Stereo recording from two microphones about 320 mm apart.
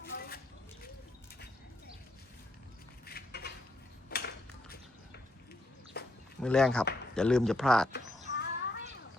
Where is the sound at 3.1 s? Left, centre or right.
Left.